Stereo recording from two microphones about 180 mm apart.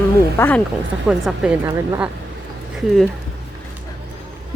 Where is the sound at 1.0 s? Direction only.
5° right (ahead or behind).